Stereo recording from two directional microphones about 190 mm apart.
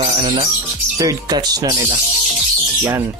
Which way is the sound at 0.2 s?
25° right (ahead or behind).